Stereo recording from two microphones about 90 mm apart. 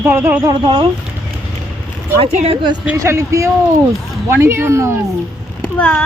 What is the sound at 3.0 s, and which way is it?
Speech, 35° right (ahead or behind).